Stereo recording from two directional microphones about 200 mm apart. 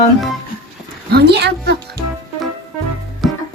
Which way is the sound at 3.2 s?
Centre (ahead or behind).